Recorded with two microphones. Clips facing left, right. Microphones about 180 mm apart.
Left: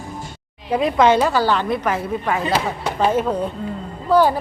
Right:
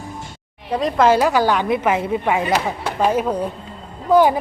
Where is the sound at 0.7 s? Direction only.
5° left (ahead or behind).